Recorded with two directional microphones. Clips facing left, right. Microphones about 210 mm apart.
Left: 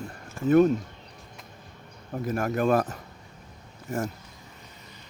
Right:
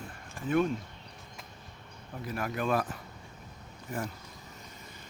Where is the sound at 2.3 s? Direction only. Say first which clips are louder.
Left 7 dB; 45° left (ahead or behind).